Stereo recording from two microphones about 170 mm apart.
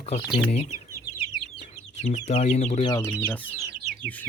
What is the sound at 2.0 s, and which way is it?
Speech, 40° left (ahead or behind).